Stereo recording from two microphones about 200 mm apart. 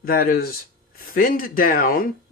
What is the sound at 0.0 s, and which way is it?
Speech, 45° left (ahead or behind).